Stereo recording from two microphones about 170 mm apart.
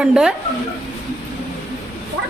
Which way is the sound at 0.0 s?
5° right (ahead or behind).